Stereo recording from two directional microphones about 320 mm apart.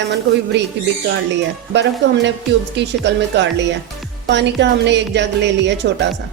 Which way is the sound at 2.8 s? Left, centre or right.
Right.